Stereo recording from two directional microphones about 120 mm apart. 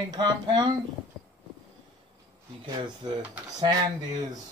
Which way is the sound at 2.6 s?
40° right (ahead or behind).